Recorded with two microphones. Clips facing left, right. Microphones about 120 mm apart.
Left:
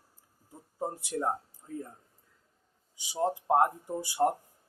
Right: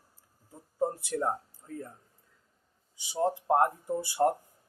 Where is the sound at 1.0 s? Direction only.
15° left (ahead or behind).